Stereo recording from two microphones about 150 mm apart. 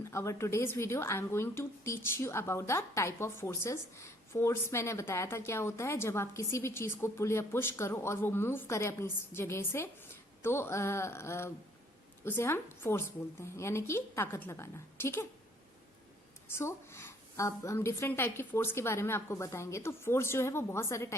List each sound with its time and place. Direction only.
0.0 s speech: 20° left (ahead or behind)
16.5 s speech: 15° left (ahead or behind)